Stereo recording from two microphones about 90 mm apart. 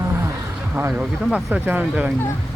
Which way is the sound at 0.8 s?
25° right (ahead or behind).